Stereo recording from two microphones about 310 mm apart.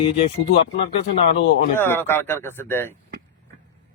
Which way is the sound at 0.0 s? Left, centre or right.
Centre.